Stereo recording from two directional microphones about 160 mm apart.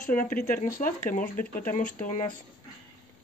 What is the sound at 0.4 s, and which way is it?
Speech, 65° left (ahead or behind).